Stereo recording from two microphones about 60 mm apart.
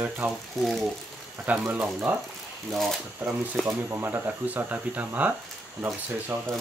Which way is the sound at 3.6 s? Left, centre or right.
Centre.